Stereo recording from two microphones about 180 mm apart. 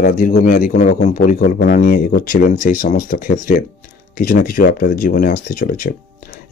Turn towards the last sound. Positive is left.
turn(degrees=55)  # may be behind; listen again after turning